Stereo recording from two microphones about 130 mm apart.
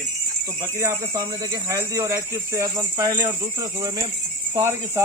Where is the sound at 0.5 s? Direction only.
20° right (ahead or behind).